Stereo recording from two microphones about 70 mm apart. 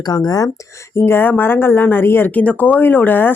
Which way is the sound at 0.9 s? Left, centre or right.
Left.